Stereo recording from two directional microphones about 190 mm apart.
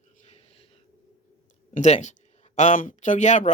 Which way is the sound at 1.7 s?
35° left (ahead or behind).